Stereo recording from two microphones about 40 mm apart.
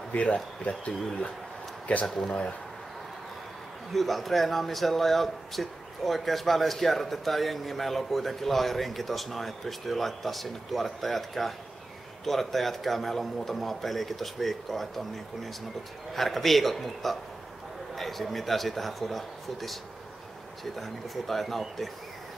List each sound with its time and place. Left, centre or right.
0.1 s speech: left
2.0 s speech: centre
3.9 s speech: centre